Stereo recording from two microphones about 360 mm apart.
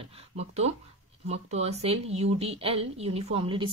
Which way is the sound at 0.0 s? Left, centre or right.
Centre.